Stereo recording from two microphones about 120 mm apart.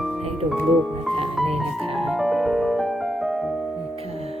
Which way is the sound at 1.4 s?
Centre (ahead or behind).